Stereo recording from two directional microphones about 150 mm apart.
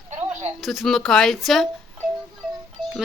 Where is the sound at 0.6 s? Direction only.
Centre (ahead or behind).